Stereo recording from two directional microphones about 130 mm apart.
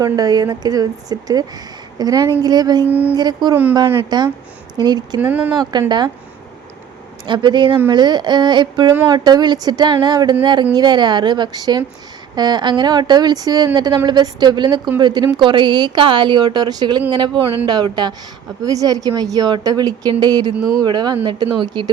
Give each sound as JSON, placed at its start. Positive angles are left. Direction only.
{"t": 0.0, "sound": "speech", "side_deg": -30}
{"t": 3.5, "sound": "speech", "side_deg": -15}
{"t": 4.1, "sound": "speech", "side_deg": -30}
{"t": 5.2, "sound": "speech", "side_deg": -10}
{"t": 7.3, "sound": "speech", "side_deg": -35}